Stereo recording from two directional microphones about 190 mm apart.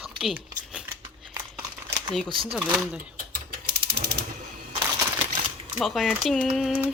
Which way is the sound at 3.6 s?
60° right (ahead or behind).